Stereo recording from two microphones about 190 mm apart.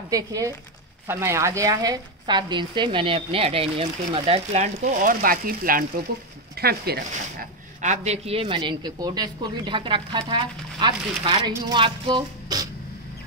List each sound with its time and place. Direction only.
0.1 s a woman's voice: 20° right (ahead or behind); by 7.4 s 55° right (ahead or behind)
7.8 s a woman's voice: 35° right (ahead or behind)